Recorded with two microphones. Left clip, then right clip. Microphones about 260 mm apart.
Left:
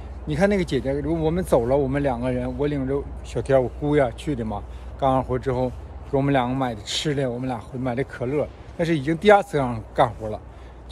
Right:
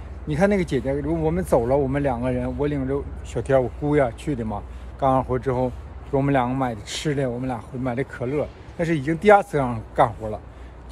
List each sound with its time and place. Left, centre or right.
0.3 s speech: centre